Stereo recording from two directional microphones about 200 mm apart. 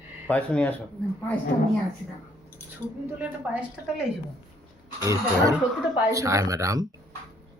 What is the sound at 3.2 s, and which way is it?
A woman's voice, 5° right (ahead or behind).